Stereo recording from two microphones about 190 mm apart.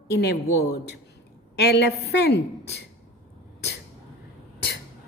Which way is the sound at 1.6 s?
60° left (ahead or behind).